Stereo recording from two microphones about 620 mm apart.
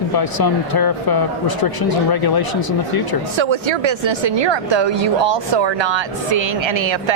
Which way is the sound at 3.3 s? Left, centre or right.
Right.